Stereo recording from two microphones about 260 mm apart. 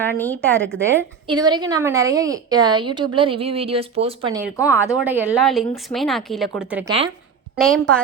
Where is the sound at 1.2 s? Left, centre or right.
Centre.